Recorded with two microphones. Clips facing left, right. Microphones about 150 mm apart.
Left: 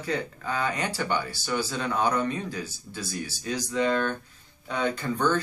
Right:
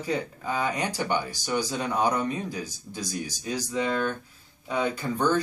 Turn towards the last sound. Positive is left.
turn(degrees=-10)  # may be behind; listen again after turning